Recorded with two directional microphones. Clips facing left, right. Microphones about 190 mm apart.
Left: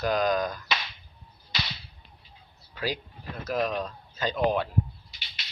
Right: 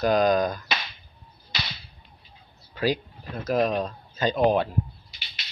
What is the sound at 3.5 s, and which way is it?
Speech, 30° right (ahead or behind).